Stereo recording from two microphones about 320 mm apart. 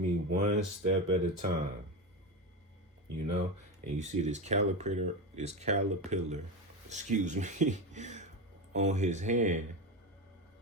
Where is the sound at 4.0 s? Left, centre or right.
Right.